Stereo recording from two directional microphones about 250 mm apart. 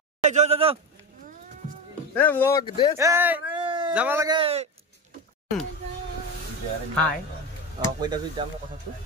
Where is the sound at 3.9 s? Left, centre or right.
Centre.